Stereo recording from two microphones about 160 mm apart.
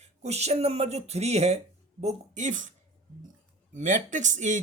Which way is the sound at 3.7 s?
50° right (ahead or behind).